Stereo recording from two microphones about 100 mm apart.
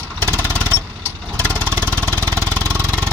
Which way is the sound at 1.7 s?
20° left (ahead or behind).